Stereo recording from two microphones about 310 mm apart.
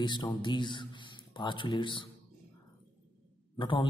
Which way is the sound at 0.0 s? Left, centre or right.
Centre.